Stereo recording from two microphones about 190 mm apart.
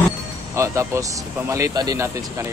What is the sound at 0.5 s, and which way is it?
Speech, 15° right (ahead or behind).